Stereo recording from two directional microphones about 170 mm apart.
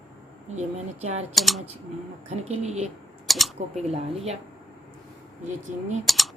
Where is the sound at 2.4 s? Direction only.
40° right (ahead or behind).